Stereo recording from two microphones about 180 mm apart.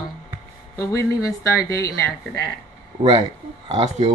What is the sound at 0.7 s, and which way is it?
Speech, 15° left (ahead or behind).